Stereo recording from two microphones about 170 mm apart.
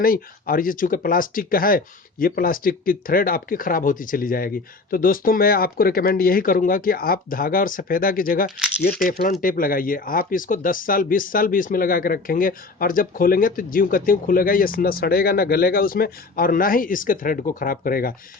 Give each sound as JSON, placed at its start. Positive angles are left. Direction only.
{"t": 0.0, "sound": "speech", "side_deg": 60}
{"t": 8.4, "sound": "speech", "side_deg": 0}
{"t": 9.0, "sound": "speech", "side_deg": 55}